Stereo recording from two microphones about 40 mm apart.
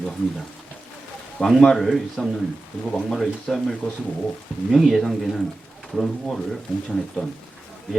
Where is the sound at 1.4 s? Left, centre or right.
Centre.